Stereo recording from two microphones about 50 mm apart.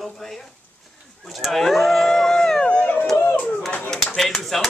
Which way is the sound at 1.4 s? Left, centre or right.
Centre.